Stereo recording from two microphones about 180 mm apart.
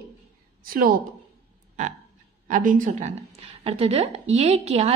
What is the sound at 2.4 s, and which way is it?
A woman's voice, 45° right (ahead or behind).